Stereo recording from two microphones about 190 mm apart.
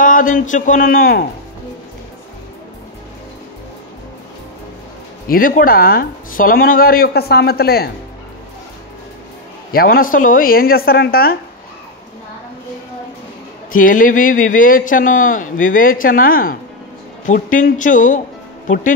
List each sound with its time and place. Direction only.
0.0 s a man's voice: 45° left (ahead or behind)
5.3 s a man's voice: 45° left (ahead or behind)
9.7 s a man's voice: 50° left (ahead or behind)
13.7 s a man's voice: 45° left (ahead or behind)